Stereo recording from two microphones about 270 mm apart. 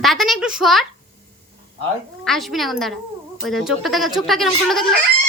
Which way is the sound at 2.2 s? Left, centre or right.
Centre.